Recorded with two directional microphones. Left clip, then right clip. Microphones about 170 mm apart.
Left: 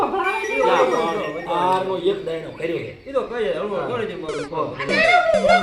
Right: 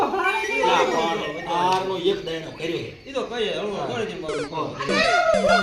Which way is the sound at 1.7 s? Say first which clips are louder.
Left 2 dB; 20° right (ahead or behind).